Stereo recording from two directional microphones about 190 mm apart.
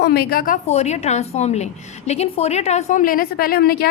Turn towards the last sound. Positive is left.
turn(degrees=55)  # may be behind; listen again after turning